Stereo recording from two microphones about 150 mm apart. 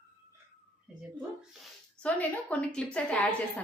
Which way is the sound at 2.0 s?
10° left (ahead or behind).